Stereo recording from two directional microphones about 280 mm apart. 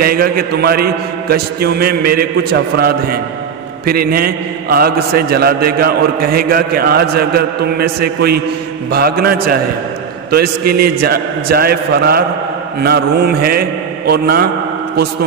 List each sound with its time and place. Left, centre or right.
0.0 s a man's voice: right